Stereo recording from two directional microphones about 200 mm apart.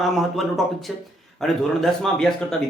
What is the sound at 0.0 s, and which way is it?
Speech, centre (ahead or behind).